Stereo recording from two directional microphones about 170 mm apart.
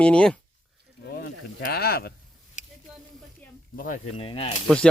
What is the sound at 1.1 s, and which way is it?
Speech, 60° left (ahead or behind).